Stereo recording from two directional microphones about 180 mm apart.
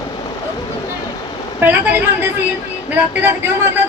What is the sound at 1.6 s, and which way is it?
A man's voice, 10° right (ahead or behind).